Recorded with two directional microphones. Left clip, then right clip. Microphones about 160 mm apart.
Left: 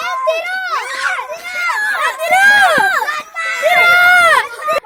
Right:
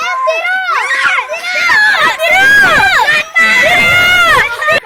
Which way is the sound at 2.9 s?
55° left (ahead or behind).